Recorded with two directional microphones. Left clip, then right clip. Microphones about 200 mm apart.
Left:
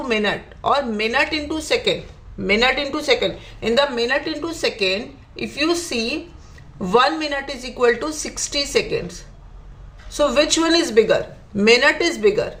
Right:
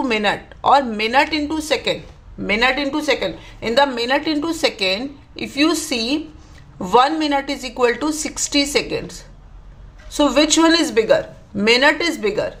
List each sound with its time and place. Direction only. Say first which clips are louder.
0.0 s a woman's voice: right 2 dB; 25° right (ahead or behind)